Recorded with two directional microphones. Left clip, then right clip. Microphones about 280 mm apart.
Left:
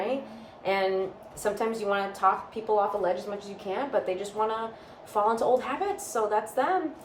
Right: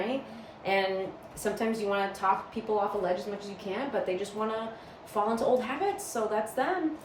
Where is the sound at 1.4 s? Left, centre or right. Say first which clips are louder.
Left 2 dB; centre.